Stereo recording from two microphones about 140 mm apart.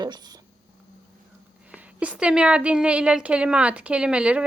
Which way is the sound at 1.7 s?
10° right (ahead or behind).